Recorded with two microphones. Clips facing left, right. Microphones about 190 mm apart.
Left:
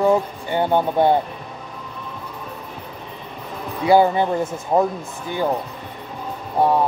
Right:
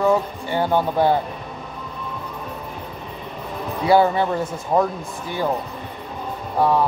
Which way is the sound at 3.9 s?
15° left (ahead or behind).